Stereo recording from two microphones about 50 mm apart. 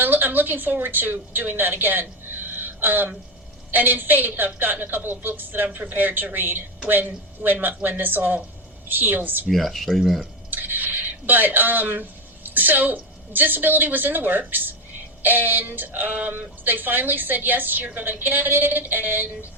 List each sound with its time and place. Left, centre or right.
0.0 s a woman's voice: right
9.5 s speech: centre
10.5 s a woman's voice: right